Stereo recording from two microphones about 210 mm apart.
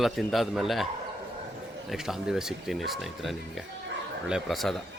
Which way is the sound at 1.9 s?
Centre (ahead or behind).